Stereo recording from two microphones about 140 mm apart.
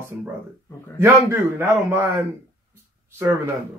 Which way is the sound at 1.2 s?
15° right (ahead or behind).